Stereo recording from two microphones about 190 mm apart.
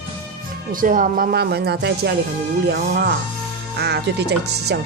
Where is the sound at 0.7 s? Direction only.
45° right (ahead or behind).